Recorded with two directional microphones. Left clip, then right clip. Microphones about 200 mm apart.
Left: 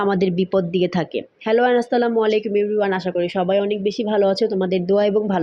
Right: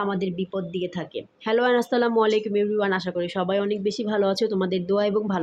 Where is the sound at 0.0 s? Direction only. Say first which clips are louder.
Left 8 dB; 25° left (ahead or behind).